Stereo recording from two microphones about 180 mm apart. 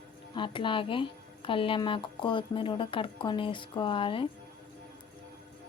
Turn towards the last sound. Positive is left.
turn(degrees=30)  # may be behind; listen again after turning